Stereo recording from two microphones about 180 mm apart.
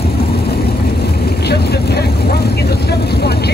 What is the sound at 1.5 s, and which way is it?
Vehicle, 65° left (ahead or behind).